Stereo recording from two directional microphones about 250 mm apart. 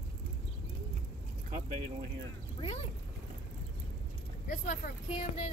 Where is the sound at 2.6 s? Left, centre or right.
Left.